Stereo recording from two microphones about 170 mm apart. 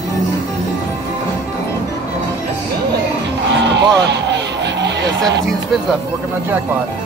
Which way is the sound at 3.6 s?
90° right.